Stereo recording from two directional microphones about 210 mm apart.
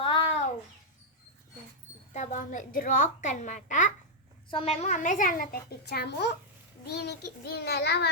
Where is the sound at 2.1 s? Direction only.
35° left (ahead or behind).